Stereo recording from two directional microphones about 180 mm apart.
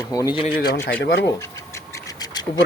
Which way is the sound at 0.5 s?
60° left (ahead or behind).